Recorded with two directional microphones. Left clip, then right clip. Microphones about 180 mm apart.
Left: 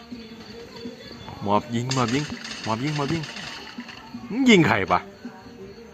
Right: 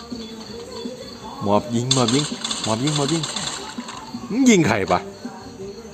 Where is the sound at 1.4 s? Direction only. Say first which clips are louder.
Right 4 dB; 5° left (ahead or behind).